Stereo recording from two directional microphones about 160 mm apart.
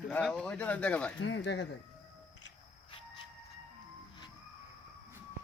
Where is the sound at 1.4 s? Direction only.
90° left.